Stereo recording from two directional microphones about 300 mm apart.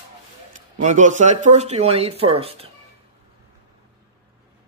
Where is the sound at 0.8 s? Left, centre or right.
Right.